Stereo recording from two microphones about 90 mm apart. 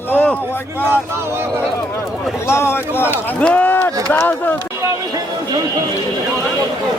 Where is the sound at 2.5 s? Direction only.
25° left (ahead or behind).